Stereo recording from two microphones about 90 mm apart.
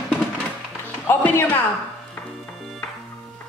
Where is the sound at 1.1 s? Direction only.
25° left (ahead or behind).